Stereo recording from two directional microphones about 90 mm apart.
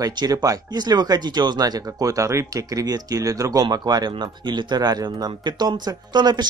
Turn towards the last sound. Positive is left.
turn(degrees=-55)  # may be behind; listen again after turning